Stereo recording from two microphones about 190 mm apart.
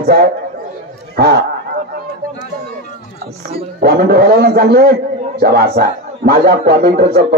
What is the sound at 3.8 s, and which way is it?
A man's voice, 55° right (ahead or behind).